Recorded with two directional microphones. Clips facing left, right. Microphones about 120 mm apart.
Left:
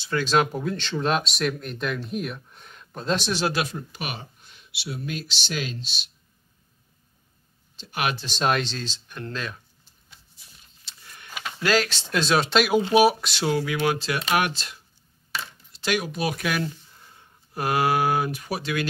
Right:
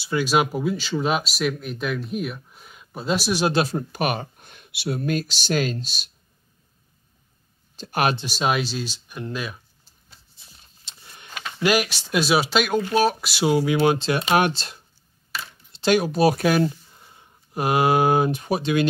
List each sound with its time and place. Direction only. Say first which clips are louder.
0.0 s speech: right 1 dB; 10° right (ahead or behind)
3.4 s speech: right 6 dB; 30° right (ahead or behind)
3.7 s speech: right 9 dB; 50° right (ahead or behind)
7.7 s speech: right 5 dB; 45° right (ahead or behind)
8.3 s speech: right 1 dB; 5° right (ahead or behind)
10.0 s vehicle: right 1 dB; 30° right (ahead or behind)
11.3 s a sound: even; 5° left (ahead or behind)
11.6 s speech: right 2 dB; 15° right (ahead or behind)
12.8 s speech: left 2 dB; 10° left (ahead or behind)
13.2 s speech: right 4 dB; 10° right (ahead or behind)